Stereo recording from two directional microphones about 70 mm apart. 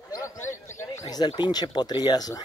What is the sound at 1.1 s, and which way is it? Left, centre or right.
Speech, left.